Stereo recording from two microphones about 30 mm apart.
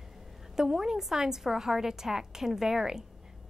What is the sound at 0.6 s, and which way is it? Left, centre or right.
A woman's voice, centre.